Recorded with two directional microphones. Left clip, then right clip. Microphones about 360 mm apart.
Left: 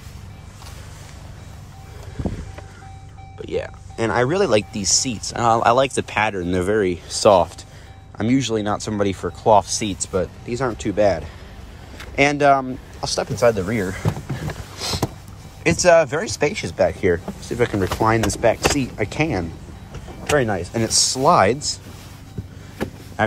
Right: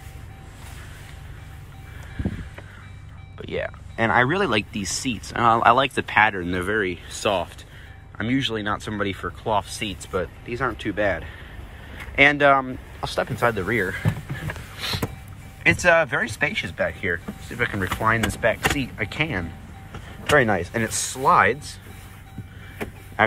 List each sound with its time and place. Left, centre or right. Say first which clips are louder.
3.3 s speech: left 2 dB; centre
12.2 s a sound: even; centre
15.6 s speech: left 3 dB; centre
20.3 s speech: right 1 dB; centre